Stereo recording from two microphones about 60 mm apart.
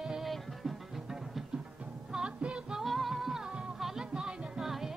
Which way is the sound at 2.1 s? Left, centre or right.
Centre.